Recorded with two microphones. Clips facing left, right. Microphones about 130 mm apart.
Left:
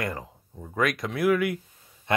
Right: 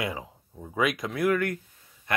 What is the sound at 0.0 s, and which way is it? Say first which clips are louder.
Speech: even; centre (ahead or behind).